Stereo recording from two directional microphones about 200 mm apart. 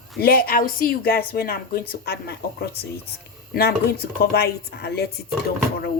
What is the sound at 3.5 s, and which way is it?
Speech, 55° left (ahead or behind).